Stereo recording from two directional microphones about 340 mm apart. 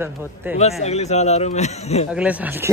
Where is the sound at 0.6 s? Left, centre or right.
Centre.